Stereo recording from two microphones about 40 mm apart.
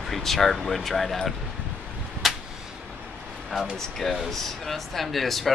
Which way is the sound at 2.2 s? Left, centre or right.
Centre.